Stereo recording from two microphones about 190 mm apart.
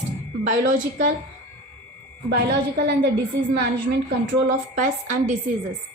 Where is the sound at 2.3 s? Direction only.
60° right (ahead or behind).